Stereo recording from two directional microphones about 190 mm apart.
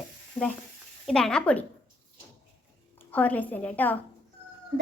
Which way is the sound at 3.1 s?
10° left (ahead or behind).